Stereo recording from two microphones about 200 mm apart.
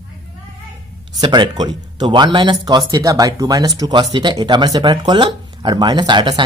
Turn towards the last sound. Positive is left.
turn(degrees=-25)  # may be behind; listen again after turning